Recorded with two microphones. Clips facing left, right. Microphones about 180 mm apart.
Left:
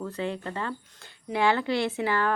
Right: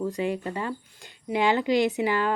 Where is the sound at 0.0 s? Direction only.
15° right (ahead or behind).